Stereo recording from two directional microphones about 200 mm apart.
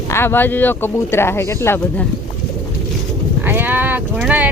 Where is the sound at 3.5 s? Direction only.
10° right (ahead or behind).